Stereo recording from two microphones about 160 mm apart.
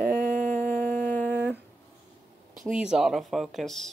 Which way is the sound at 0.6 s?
10° left (ahead or behind).